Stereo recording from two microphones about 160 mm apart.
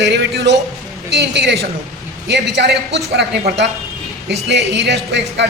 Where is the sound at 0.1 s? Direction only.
90° right.